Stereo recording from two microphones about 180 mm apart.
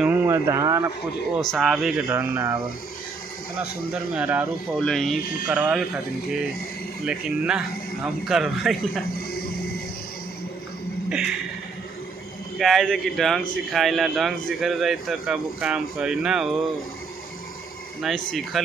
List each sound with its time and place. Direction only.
0.0 s speech: 15° right (ahead or behind)
1.5 s speech: centre (ahead or behind)
2.0 s speech: 15° right (ahead or behind)
3.9 s speech: 5° right (ahead or behind)
4.7 s speech: centre (ahead or behind)
7.1 s speech: 5° right (ahead or behind)
11.1 s a sound: 5° right (ahead or behind)
12.5 s speech: centre (ahead or behind)
18.0 s speech: centre (ahead or behind)